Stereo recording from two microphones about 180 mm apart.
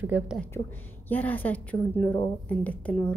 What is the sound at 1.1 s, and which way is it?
A woman's voice, 10° left (ahead or behind).